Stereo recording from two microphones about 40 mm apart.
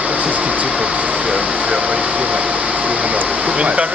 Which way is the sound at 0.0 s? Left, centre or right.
Right.